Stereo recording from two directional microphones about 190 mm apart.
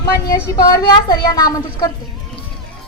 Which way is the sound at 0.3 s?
20° left (ahead or behind).